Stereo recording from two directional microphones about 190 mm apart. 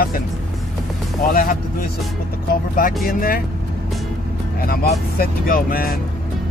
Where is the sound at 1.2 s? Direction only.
45° left (ahead or behind).